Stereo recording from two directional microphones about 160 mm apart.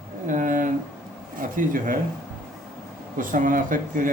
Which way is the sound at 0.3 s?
55° right (ahead or behind).